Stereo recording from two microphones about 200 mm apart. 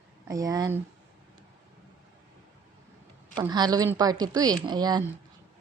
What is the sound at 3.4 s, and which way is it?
A woman's voice, 20° right (ahead or behind).